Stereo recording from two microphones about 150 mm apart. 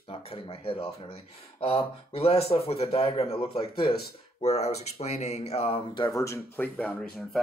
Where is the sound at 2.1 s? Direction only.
40° left (ahead or behind).